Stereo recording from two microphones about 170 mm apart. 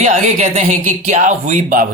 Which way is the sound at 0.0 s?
45° right (ahead or behind).